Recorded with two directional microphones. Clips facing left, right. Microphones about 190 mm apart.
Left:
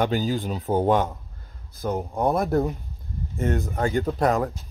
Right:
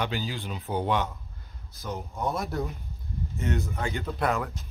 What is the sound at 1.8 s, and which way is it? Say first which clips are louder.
Speech: left 8 dB; 60° left (ahead or behind).